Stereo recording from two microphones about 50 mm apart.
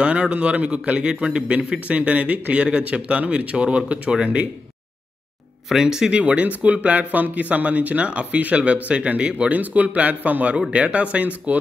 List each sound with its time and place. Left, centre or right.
0.0 s speech: right
5.7 s speech: centre
6.1 s speech: right